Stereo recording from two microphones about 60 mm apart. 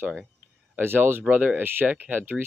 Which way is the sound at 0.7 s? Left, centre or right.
Right.